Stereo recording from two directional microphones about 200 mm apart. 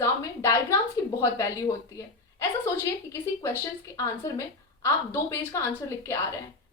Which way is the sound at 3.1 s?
15° left (ahead or behind).